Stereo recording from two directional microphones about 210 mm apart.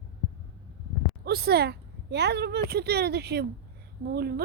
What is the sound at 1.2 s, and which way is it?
A woman's voice, 50° right (ahead or behind).